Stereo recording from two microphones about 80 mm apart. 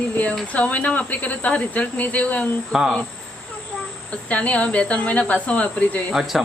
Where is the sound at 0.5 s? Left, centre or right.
Centre.